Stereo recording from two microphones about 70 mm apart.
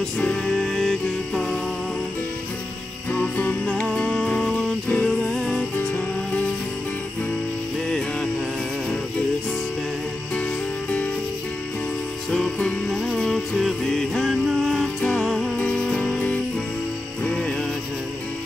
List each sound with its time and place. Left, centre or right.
0.2 s music: centre
3.1 s music: left
3.6 s music: centre
13.1 s music: centre
15.5 s music: centre